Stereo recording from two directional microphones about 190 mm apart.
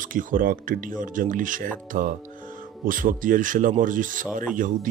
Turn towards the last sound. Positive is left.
turn(degrees=-45)  # may be behind; listen again after turning